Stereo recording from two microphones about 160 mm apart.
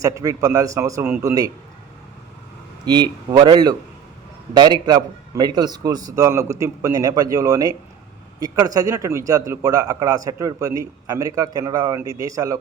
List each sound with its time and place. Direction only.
0.0 s a man's voice: 20° right (ahead or behind)
2.8 s a man's voice: 25° right (ahead or behind)